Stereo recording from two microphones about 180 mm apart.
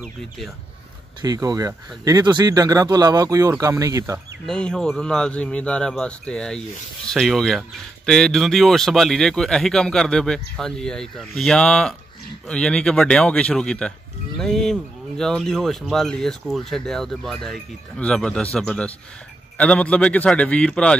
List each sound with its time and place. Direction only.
0.0 s speech: centre (ahead or behind)
1.2 s speech: 20° right (ahead or behind)
4.5 s a man's voice: 5° left (ahead or behind)